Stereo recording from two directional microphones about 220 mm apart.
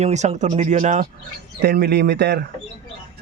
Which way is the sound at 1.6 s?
45° right (ahead or behind).